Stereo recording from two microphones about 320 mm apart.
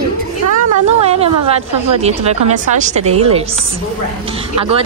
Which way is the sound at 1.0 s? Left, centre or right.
Centre.